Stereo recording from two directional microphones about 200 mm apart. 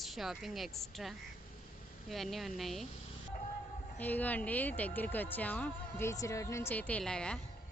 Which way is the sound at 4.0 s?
10° left (ahead or behind).